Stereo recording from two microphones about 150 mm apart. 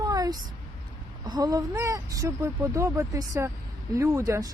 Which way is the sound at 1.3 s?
25° right (ahead or behind).